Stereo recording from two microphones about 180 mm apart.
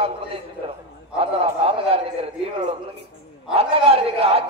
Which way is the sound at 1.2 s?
35° right (ahead or behind).